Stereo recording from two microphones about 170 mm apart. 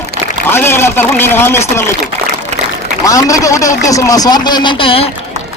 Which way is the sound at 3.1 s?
20° left (ahead or behind).